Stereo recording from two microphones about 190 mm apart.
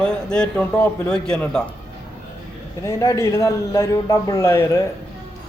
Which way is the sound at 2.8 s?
15° left (ahead or behind).